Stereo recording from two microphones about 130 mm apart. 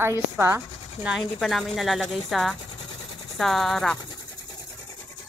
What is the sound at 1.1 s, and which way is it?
A woman's voice, centre (ahead or behind).